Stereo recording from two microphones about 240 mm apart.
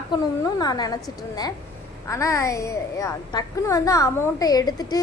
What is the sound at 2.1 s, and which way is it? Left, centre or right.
A woman's voice, centre.